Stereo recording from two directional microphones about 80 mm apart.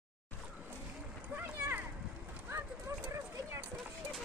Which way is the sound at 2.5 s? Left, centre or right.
Right.